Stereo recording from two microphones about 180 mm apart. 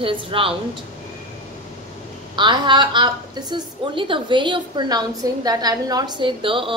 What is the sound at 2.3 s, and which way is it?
A woman's voice, 25° right (ahead or behind).